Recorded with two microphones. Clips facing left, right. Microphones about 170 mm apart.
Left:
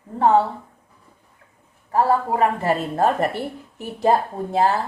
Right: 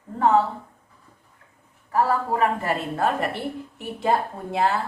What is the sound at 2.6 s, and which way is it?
A woman's voice, 40° left (ahead or behind).